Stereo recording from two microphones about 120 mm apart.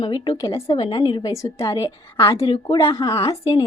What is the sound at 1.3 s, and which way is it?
Speech, 25° left (ahead or behind).